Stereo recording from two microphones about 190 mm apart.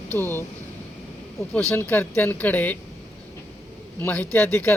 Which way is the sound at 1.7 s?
10° left (ahead or behind).